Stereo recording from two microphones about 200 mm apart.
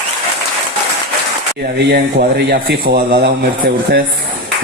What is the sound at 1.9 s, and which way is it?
Speech, 50° right (ahead or behind).